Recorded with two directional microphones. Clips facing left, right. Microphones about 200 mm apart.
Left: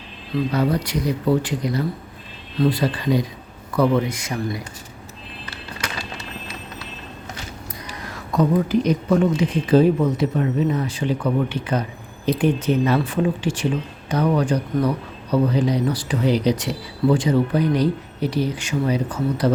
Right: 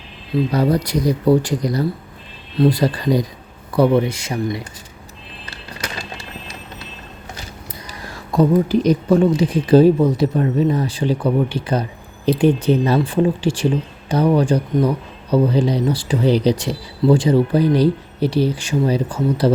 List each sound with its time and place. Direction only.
0.5 s speech: 35° right (ahead or behind)
3.7 s speech: 30° right (ahead or behind)
8.4 s speech: 30° right (ahead or behind)